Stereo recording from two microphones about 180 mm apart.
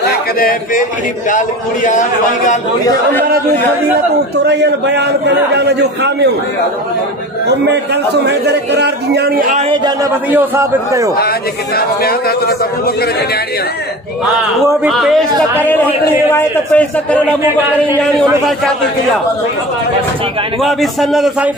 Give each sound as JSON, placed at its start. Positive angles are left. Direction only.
{"t": 0.4, "sound": "a man's voice", "side_deg": 55}
{"t": 1.9, "sound": "a man's voice", "side_deg": 45}
{"t": 4.5, "sound": "a man's voice", "side_deg": -70}
{"t": 7.4, "sound": "a man's voice", "side_deg": -70}
{"t": 10.3, "sound": "a man's voice", "side_deg": -10}
{"t": 11.1, "sound": "a man's voice", "side_deg": 60}
{"t": 14.9, "sound": "a man's voice", "side_deg": 0}
{"t": 15.6, "sound": "a man's voice", "side_deg": 10}
{"t": 20.6, "sound": "a man's voice", "side_deg": 0}